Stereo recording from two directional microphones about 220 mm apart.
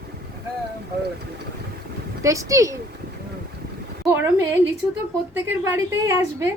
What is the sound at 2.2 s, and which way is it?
Speech, 15° right (ahead or behind).